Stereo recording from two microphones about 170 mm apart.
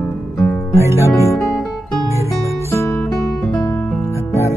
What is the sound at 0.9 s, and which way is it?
Music, 15° left (ahead or behind).